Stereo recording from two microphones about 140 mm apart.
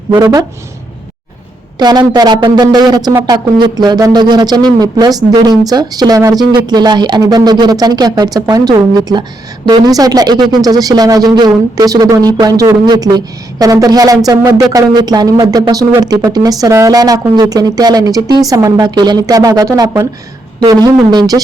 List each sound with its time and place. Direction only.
0.1 s speech: 25° right (ahead or behind)
1.8 s speech: 30° right (ahead or behind)